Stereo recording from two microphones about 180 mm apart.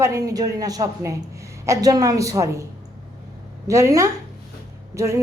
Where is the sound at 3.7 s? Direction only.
15° right (ahead or behind).